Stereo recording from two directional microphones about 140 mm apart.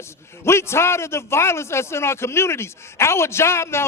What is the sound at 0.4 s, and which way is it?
A man's voice, 20° left (ahead or behind).